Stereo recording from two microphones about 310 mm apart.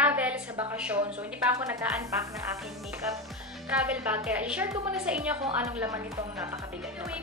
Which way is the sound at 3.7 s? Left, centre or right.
Centre.